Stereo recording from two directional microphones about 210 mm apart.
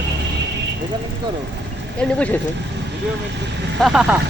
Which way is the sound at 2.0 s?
5° left (ahead or behind).